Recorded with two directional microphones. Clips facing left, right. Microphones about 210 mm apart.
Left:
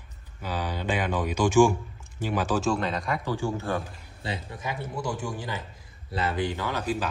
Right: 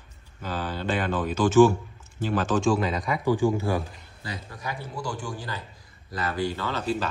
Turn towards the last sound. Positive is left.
turn(degrees=10)  # may be behind; listen again after turning